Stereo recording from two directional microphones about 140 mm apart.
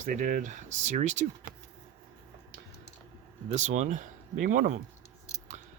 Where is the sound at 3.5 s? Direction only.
60° right (ahead or behind).